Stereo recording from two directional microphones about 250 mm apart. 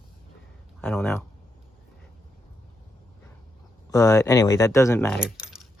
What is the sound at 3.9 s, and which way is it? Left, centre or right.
Speech, centre.